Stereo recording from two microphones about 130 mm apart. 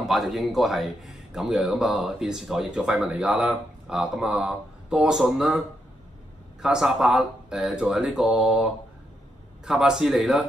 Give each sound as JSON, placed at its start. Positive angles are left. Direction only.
{"t": 0.1, "sound": "a man's voice", "side_deg": 0}
{"t": 6.6, "sound": "a man's voice", "side_deg": -5}